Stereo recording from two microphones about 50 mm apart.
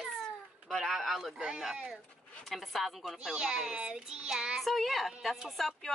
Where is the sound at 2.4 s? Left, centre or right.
Centre.